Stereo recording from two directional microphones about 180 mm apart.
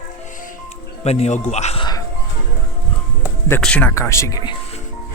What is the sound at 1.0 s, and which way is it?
Speech, 35° left (ahead or behind).